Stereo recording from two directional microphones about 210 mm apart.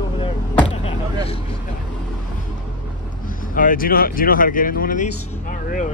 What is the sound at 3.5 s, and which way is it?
Speech, 40° left (ahead or behind).